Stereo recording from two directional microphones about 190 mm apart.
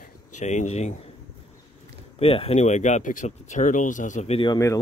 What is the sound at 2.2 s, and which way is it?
Speech, 30° left (ahead or behind).